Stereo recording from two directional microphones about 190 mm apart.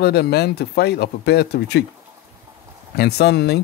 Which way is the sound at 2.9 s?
60° left (ahead or behind).